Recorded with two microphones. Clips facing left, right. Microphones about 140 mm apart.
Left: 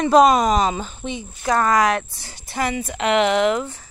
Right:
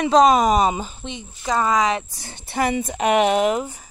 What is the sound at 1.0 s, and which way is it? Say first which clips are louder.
Speech: left 4 dB; 5° left (ahead or behind).